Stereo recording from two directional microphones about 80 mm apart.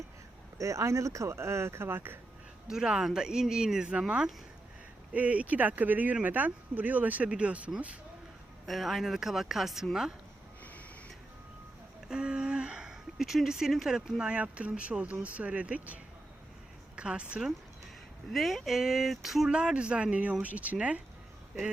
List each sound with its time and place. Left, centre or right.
0.6 s speech: right
2.6 s speech: centre
8.6 s speech: centre
12.0 s speech: centre
18.3 s speech: centre